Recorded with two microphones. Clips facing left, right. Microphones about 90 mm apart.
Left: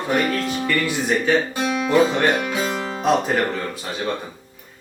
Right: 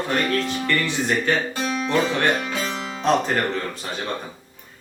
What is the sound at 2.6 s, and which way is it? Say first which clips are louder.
Music: left 4 dB; 45° left (ahead or behind).